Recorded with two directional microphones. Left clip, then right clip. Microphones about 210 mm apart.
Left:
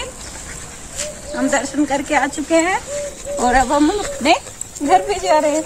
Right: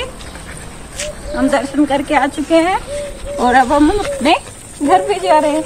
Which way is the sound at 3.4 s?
20° left (ahead or behind).